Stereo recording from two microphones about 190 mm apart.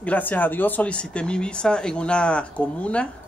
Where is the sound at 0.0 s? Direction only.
10° left (ahead or behind).